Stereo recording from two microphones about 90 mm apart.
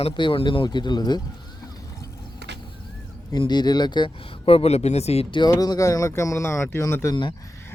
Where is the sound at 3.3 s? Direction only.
50° left (ahead or behind); by 5.3 s 90° left.